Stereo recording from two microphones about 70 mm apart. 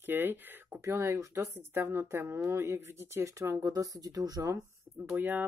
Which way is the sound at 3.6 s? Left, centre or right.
Right.